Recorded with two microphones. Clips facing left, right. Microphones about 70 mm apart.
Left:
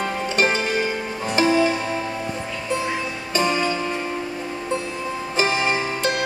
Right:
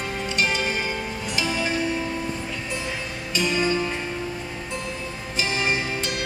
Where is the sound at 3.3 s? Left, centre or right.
Left.